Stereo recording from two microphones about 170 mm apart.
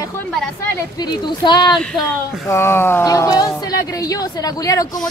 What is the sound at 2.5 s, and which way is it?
A man's voice, 15° left (ahead or behind).